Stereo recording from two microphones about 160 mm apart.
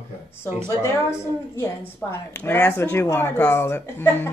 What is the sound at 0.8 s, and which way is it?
Speech, 15° left (ahead or behind).